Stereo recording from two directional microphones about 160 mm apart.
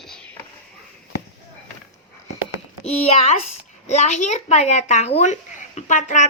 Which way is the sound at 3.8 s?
45° left (ahead or behind).